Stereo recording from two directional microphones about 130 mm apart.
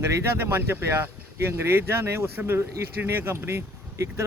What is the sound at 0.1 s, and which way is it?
A man's voice, 20° right (ahead or behind).